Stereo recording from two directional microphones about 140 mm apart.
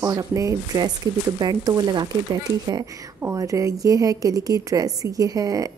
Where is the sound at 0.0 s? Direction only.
25° right (ahead or behind).